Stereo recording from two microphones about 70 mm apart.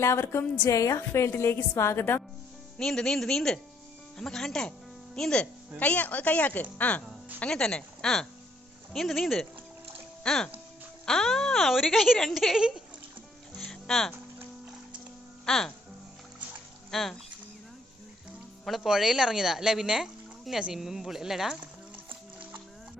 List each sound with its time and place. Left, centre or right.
0.0 s a woman's voice: left
2.7 s speech: centre
5.8 s speech: left
7.5 s speech: centre
13.6 s music: centre
15.4 s speech: centre
16.9 s speech: centre
18.6 s speech: centre